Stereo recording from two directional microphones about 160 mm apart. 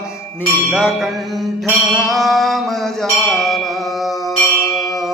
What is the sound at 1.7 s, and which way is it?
Music, centre (ahead or behind).